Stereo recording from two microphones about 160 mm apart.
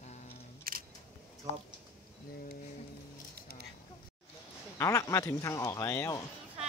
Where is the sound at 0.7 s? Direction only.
65° right (ahead or behind).